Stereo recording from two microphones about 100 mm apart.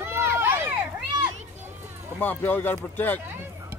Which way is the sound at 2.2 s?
20° left (ahead or behind).